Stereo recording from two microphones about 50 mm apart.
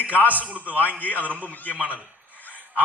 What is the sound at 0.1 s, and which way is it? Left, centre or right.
Music, left.